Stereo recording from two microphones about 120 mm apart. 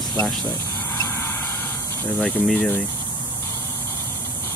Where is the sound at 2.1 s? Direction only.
5° left (ahead or behind).